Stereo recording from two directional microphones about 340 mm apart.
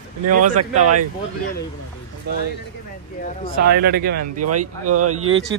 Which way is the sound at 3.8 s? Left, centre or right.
Right.